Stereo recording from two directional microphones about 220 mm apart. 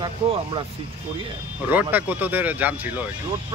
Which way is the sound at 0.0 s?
20° right (ahead or behind).